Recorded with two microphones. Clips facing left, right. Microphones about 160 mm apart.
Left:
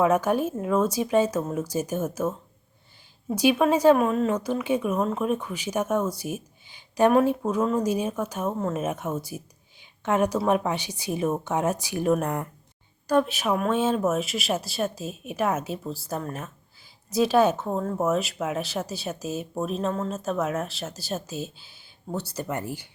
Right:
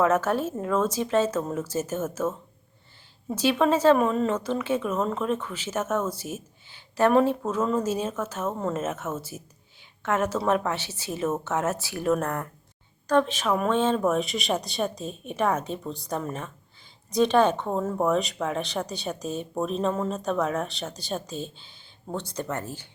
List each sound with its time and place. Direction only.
0.0 s speech: 15° left (ahead or behind)
3.3 s speech: 15° left (ahead or behind)
3.9 s speech: centre (ahead or behind)